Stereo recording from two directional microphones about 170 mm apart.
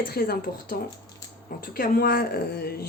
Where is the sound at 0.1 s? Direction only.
60° left (ahead or behind).